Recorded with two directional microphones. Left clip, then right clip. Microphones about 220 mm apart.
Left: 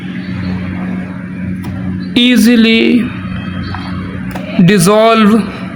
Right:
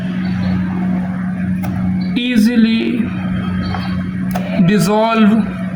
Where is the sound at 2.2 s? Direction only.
55° left (ahead or behind).